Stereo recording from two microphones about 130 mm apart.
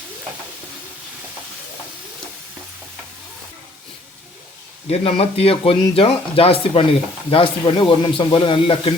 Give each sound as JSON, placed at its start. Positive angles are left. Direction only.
{"t": 4.9, "sound": "speech", "side_deg": 50}